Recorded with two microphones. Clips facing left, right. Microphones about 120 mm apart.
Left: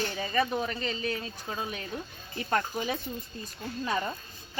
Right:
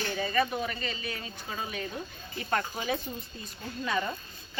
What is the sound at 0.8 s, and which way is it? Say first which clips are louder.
Speech: left 4 dB; 40° left (ahead or behind).